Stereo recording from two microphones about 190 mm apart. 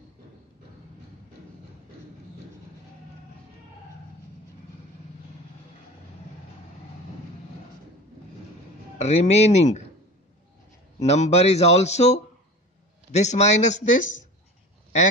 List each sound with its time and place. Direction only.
8.9 s speech: 35° left (ahead or behind)
11.0 s speech: 35° left (ahead or behind)